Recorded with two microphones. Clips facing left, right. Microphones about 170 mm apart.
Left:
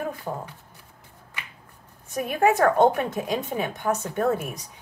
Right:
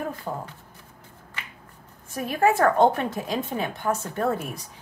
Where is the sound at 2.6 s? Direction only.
Centre (ahead or behind).